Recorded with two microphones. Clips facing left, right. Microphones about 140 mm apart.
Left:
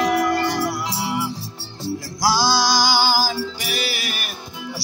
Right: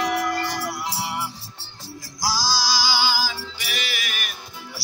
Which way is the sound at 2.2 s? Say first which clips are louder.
Left 6 dB; 60° left (ahead or behind).